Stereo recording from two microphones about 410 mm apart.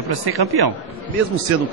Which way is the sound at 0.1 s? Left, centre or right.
Right.